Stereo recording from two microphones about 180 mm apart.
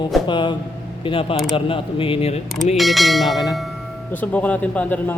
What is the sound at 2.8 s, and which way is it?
Bell, centre (ahead or behind).